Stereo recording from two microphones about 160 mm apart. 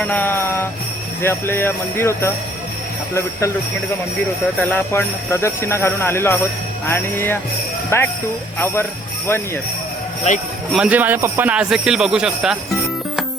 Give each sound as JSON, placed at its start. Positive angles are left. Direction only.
{"t": 0.0, "sound": "jingle bell", "side_deg": 10}
{"t": 1.2, "sound": "speech", "side_deg": 15}
{"t": 4.7, "sound": "speech", "side_deg": 15}
{"t": 8.5, "sound": "jingle bell", "side_deg": 15}
{"t": 10.7, "sound": "a man's voice", "side_deg": -5}